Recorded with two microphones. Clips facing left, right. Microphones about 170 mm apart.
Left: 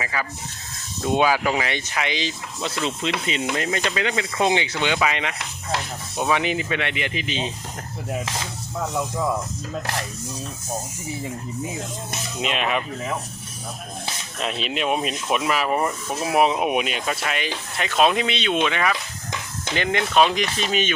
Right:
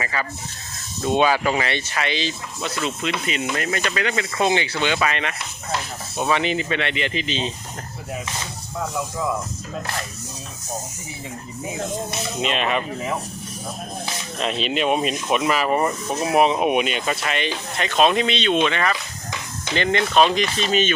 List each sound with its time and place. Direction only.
0.0 s speech: 5° left (ahead or behind)
3.2 s speech: 30° left (ahead or behind)
6.3 s speech: 10° left (ahead or behind)
12.4 s speech: 5° left (ahead or behind)
14.3 s speech: 5° left (ahead or behind)